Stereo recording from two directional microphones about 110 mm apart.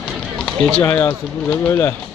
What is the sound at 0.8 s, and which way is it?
Speech, 20° left (ahead or behind).